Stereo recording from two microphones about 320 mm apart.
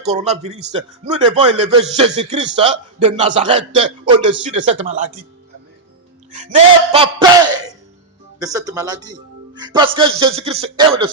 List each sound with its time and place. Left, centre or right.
0.0 s a man's voice: centre
6.3 s a sound: right
8.4 s a man's voice: centre